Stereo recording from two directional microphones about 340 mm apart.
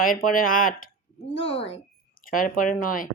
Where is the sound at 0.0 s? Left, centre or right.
Left.